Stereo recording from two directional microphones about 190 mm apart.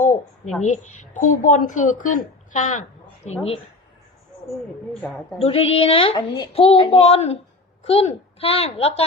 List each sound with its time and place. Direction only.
0.0 s a sound: 40° left (ahead or behind)
0.6 s a woman's voice: 40° left (ahead or behind)
5.4 s a woman's voice: 30° left (ahead or behind)